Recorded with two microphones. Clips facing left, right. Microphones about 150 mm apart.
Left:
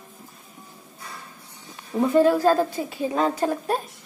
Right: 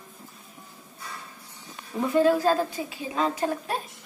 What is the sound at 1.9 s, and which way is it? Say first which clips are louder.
A woman's voice: left 3 dB; 40° left (ahead or behind).